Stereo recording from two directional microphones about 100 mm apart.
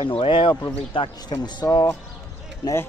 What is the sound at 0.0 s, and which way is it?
Speech, 60° left (ahead or behind).